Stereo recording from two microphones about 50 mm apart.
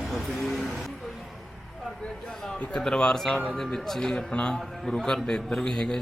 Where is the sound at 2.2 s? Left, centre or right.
Centre.